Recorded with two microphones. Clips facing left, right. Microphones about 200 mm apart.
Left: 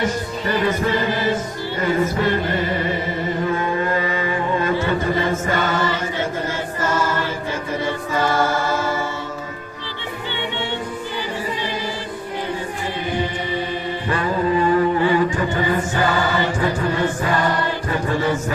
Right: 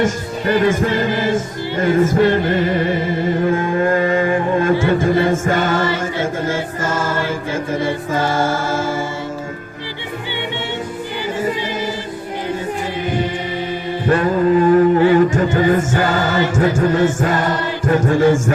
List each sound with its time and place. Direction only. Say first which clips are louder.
0.0 s music: right 4 dB; 50° right (ahead or behind)
5.5 s choir: right 4 dB; 50° right (ahead or behind)
8.1 s music: even; 50° right (ahead or behind)
14.1 s music: right 6 dB; 45° right (ahead or behind)